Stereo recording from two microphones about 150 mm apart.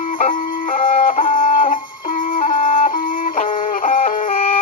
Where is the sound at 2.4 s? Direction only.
45° left (ahead or behind).